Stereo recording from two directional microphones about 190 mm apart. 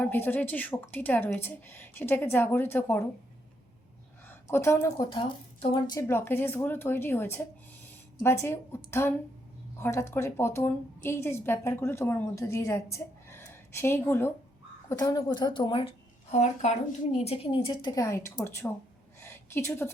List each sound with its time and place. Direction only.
0.0 s a woman's voice: 10° left (ahead or behind)
4.3 s a woman's voice: 15° left (ahead or behind)
19.2 s a sound: 10° left (ahead or behind)